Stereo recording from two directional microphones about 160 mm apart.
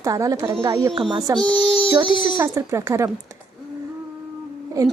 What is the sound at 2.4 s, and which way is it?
Speech, 20° right (ahead or behind).